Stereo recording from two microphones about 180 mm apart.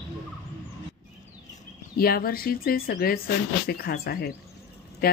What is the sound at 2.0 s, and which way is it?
Speech, 55° left (ahead or behind).